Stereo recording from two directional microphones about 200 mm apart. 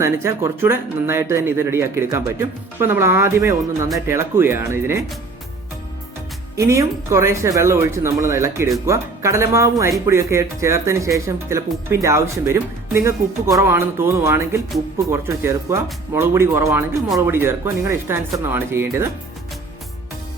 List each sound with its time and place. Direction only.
0.0 s speech: 15° right (ahead or behind)
6.6 s speech: 15° right (ahead or behind)